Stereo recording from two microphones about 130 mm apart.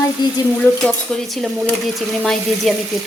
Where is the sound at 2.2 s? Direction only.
Centre (ahead or behind).